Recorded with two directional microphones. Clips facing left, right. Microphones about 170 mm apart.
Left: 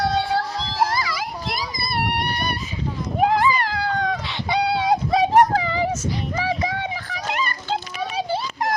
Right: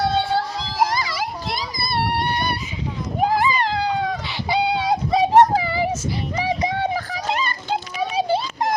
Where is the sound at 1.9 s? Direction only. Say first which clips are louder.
Right 3 dB; 25° right (ahead or behind).